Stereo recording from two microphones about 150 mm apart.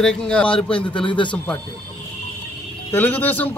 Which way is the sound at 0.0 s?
5° left (ahead or behind).